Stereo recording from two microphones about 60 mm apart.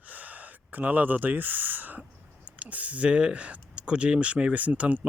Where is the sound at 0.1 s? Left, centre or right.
Right.